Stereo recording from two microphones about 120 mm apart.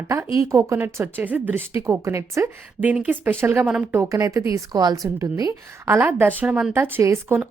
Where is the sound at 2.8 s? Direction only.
10° right (ahead or behind).